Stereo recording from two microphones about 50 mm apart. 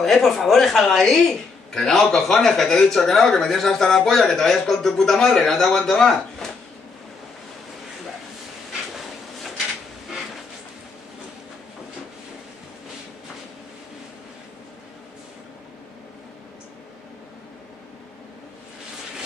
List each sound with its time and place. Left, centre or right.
0.0 s a woman's voice: centre